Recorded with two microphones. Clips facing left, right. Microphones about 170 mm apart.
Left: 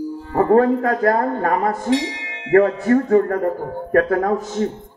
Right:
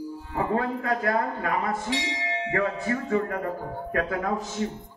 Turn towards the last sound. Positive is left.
turn(degrees=50)  # may be behind; listen again after turning